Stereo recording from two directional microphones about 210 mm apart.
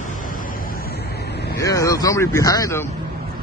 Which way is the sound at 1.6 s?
15° left (ahead or behind).